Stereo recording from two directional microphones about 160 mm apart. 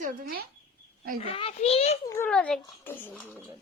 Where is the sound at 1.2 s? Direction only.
35° left (ahead or behind).